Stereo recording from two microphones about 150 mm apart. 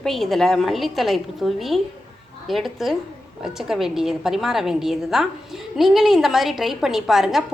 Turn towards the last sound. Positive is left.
turn(degrees=0)  # may be behind; listen again after turning